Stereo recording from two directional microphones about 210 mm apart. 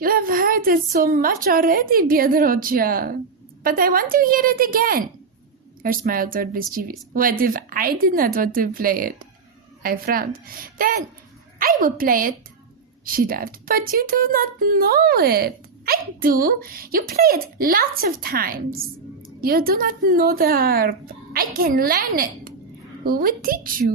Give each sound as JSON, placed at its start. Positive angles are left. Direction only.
{"t": 0.0, "sound": "a woman's voice", "side_deg": -45}